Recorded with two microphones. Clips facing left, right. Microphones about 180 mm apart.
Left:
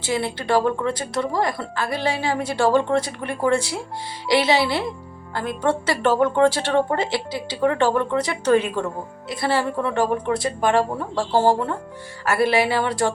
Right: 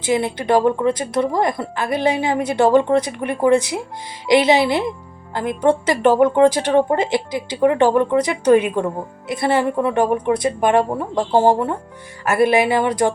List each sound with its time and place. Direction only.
0.0 s a woman's voice: 20° right (ahead or behind)